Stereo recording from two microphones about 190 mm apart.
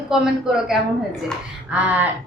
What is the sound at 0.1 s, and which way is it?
A woman's voice, 5° right (ahead or behind).